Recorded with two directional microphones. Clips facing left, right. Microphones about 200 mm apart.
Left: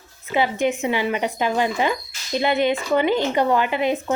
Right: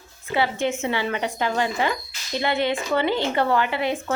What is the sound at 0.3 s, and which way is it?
A woman's voice, 15° left (ahead or behind).